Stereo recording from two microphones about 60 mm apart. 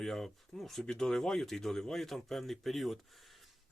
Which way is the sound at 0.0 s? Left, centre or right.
Centre.